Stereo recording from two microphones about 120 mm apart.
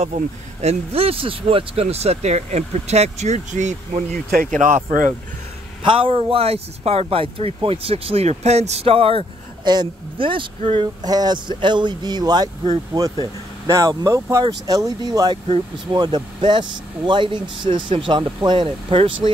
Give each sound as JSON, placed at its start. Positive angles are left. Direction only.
{"t": 0.0, "sound": "speech", "side_deg": -65}
{"t": 4.5, "sound": "speech", "side_deg": -90}
{"t": 5.9, "sound": "speech", "side_deg": -45}
{"t": 9.7, "sound": "speech", "side_deg": -40}
{"t": 11.1, "sound": "speech", "side_deg": -35}